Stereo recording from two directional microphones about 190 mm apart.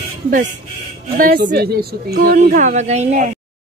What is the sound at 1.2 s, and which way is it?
A woman's voice, 55° right (ahead or behind).